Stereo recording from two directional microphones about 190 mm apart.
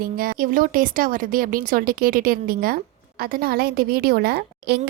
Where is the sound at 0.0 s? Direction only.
50° right (ahead or behind).